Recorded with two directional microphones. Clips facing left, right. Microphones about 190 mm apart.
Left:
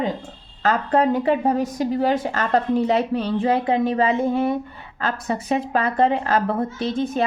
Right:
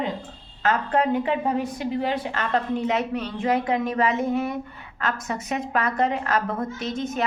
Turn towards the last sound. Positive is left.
turn(degrees=30)  # may be behind; listen again after turning